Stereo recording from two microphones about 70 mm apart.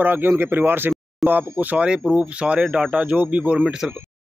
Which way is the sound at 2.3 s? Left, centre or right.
Centre.